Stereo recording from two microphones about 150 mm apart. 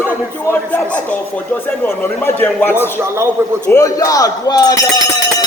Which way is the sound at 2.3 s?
15° left (ahead or behind).